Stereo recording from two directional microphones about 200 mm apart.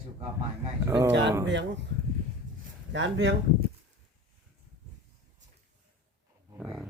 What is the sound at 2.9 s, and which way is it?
Speech, 65° right (ahead or behind).